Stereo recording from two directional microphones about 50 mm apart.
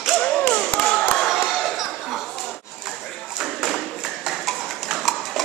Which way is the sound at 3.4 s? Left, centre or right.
Centre.